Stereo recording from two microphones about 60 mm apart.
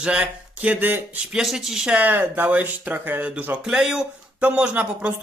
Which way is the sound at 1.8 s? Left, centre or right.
Right.